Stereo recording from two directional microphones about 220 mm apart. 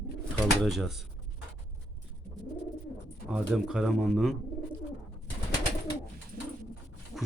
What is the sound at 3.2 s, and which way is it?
Speech, 5° right (ahead or behind).